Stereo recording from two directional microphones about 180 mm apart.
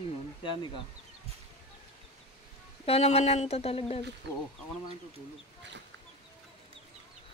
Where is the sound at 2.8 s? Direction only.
35° left (ahead or behind).